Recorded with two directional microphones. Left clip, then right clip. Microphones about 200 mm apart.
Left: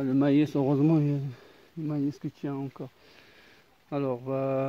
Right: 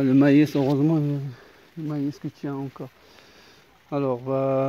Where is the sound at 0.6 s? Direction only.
20° left (ahead or behind).